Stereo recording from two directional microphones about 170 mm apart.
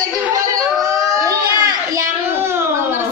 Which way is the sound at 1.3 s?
20° right (ahead or behind).